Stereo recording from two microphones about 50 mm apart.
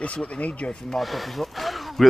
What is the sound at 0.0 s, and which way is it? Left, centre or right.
Speech, left.